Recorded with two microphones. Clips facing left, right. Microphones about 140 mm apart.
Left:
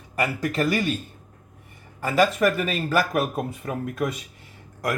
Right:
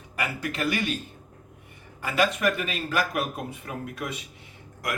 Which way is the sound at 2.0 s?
40° left (ahead or behind).